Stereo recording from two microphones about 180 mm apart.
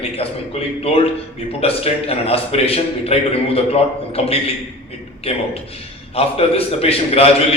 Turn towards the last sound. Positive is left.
turn(degrees=35)  # may be behind; listen again after turning